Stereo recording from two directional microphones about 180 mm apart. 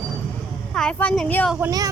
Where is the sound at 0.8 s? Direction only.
5° left (ahead or behind).